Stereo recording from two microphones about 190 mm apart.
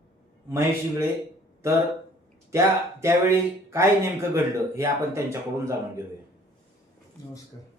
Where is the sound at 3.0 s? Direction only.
15° right (ahead or behind).